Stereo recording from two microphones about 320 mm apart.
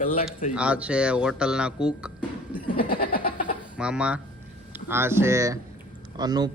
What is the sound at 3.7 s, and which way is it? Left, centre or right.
Speech, centre.